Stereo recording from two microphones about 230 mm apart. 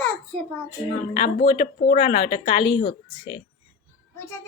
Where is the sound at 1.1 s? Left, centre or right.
Left.